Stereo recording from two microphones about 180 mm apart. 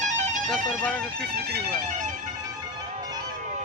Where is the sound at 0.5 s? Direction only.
5° left (ahead or behind).